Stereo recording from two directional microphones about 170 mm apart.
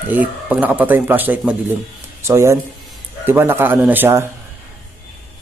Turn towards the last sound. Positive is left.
turn(degrees=-15)  # may be behind; listen again after turning